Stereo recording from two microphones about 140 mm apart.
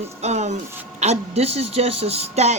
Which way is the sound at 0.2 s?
55° right (ahead or behind).